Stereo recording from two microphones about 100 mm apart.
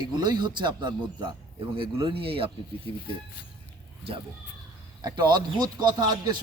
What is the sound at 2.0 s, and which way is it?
Speech, 70° right (ahead or behind).